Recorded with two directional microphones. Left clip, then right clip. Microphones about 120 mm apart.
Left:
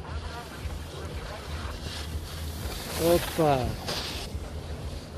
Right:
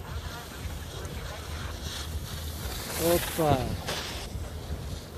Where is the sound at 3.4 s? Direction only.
10° right (ahead or behind).